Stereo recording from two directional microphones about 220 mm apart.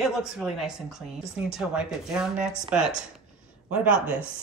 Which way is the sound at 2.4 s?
5° right (ahead or behind).